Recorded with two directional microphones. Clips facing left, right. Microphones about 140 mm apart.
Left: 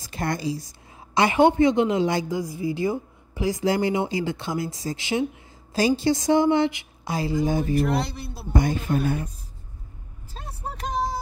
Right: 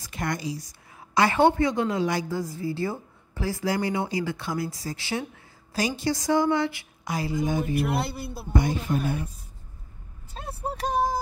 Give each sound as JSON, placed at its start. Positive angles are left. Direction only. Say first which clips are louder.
{"t": 0.0, "sound": "a woman's voice", "louder": "left 3 dB", "side_deg": 30}
{"t": 2.3, "sound": "speech", "louder": "left 3 dB", "side_deg": 15}
{"t": 7.8, "sound": "speech", "louder": "left 2 dB", "side_deg": -5}
{"t": 8.5, "sound": "speech", "louder": "left 2 dB", "side_deg": 60}